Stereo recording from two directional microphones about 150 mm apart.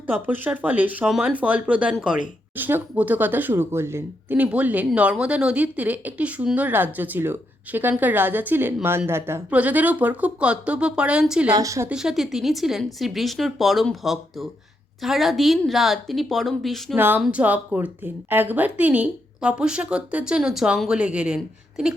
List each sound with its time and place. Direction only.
0.1 s speech: 10° right (ahead or behind)
11.5 s speech: 20° right (ahead or behind)
11.9 s speech: 5° right (ahead or behind)
16.9 s speech: 15° right (ahead or behind)